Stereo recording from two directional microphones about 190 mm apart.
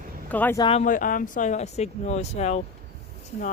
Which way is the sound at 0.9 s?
45° left (ahead or behind).